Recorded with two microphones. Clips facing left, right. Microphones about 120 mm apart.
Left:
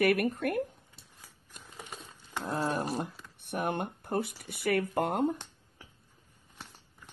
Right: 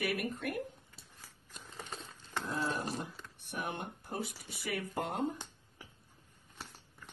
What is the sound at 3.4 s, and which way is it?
Speech, 60° left (ahead or behind).